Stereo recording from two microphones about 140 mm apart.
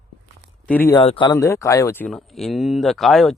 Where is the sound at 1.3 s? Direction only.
20° left (ahead or behind).